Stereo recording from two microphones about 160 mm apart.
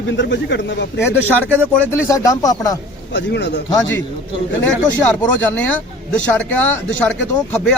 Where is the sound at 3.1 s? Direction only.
90° left.